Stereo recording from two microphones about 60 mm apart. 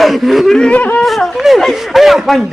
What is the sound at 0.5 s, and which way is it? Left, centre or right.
Speech, centre.